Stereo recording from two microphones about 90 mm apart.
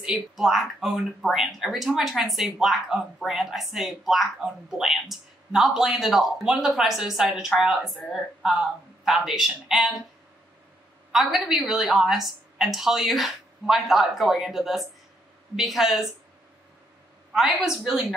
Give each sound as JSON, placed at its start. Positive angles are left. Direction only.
{"t": 0.0, "sound": "speech", "side_deg": -5}
{"t": 11.1, "sound": "speech", "side_deg": -5}
{"t": 17.3, "sound": "a woman's voice", "side_deg": -5}